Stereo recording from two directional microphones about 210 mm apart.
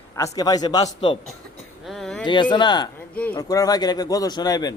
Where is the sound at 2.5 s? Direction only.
20° left (ahead or behind).